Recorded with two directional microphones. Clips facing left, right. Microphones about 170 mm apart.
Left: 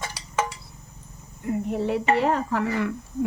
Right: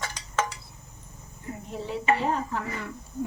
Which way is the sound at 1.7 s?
65° left (ahead or behind).